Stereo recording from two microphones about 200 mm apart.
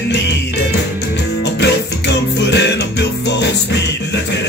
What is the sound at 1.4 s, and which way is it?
Music, 60° left (ahead or behind).